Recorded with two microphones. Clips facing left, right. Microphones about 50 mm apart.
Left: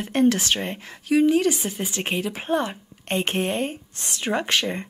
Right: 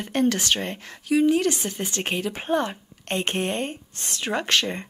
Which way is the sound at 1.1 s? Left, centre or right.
Left.